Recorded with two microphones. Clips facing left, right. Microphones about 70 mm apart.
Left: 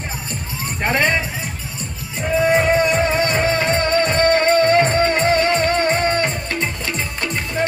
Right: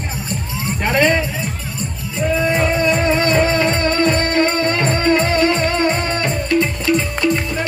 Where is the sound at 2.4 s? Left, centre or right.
Left.